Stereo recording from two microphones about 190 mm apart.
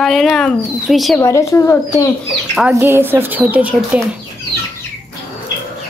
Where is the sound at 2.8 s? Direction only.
10° right (ahead or behind).